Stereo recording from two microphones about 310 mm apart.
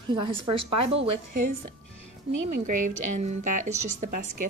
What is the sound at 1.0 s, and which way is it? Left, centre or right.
Speech, right.